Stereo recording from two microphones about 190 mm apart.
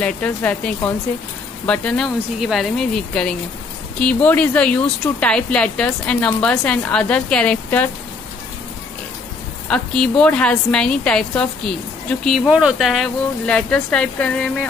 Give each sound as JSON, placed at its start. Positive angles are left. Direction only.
{"t": 0.0, "sound": "speech", "side_deg": 5}
{"t": 4.0, "sound": "speech", "side_deg": 5}
{"t": 9.7, "sound": "speech", "side_deg": 5}